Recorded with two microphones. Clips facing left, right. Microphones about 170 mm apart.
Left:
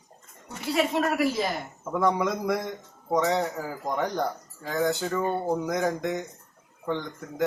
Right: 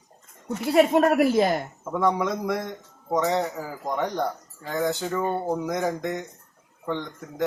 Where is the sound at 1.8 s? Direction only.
Centre (ahead or behind).